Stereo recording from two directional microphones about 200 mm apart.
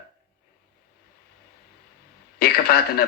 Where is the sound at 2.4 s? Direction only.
50° left (ahead or behind).